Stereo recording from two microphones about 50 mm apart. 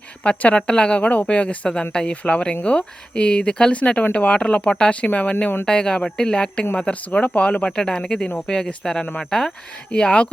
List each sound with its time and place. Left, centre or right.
0.2 s speech: left